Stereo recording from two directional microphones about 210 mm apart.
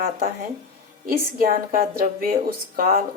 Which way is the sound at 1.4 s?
45° right (ahead or behind).